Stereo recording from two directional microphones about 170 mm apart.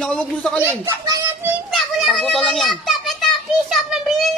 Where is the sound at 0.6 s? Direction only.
20° right (ahead or behind).